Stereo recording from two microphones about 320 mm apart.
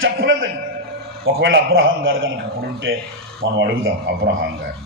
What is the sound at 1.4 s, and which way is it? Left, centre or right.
Speech, right.